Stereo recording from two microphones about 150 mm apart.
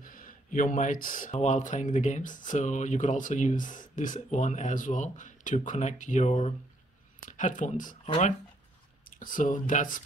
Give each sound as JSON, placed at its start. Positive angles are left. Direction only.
{"t": 0.0, "sound": "speech", "side_deg": 65}
{"t": 9.2, "sound": "speech", "side_deg": 60}